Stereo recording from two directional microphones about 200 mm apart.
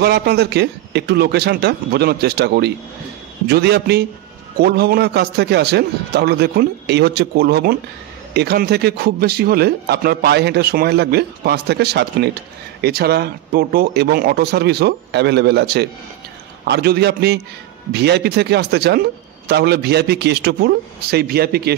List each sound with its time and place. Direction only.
0.0 s a man's voice: 55° right (ahead or behind)